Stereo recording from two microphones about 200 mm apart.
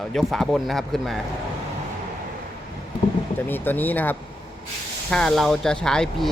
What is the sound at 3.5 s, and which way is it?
Speech, 10° left (ahead or behind).